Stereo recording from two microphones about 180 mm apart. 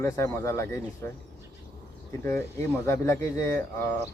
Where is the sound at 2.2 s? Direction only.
15° left (ahead or behind).